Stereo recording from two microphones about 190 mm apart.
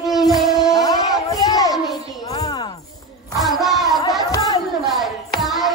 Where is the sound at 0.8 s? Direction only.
20° left (ahead or behind).